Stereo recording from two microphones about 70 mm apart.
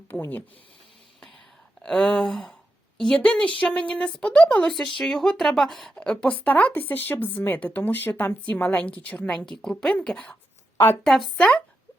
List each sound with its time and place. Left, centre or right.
1.8 s speech: centre
4.6 s speech: centre
5.9 s speech: centre
9.4 s speech: centre
11.3 s speech: left